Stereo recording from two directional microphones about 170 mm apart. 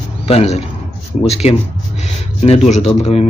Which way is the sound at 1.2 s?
40° left (ahead or behind).